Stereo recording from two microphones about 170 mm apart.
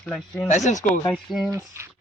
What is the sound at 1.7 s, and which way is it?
Speech, 15° right (ahead or behind).